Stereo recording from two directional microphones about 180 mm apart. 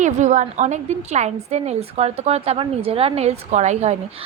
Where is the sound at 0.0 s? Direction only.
40° right (ahead or behind).